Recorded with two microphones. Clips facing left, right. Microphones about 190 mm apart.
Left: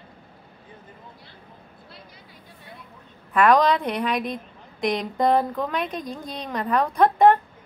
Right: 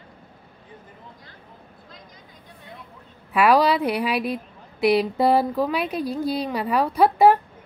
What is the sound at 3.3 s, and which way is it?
A woman's voice, 5° right (ahead or behind).